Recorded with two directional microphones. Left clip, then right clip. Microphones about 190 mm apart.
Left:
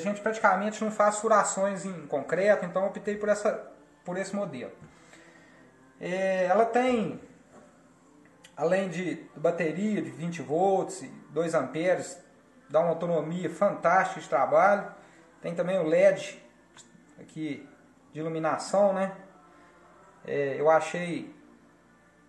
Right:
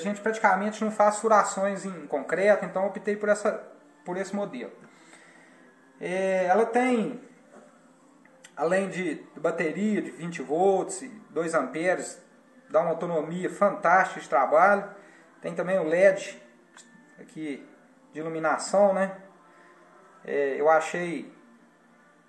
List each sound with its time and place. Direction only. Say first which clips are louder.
0.0 s a man's voice: right 1 dB; centre (ahead or behind); by 4.6 s 20° left (ahead or behind)
5.9 s a man's voice: right 1 dB; centre (ahead or behind)
8.5 s a man's voice: right 1 dB; 5° left (ahead or behind)
18.1 s a man's voice: right 2 dB; 5° right (ahead or behind)
20.2 s a man's voice: right 2 dB; centre (ahead or behind)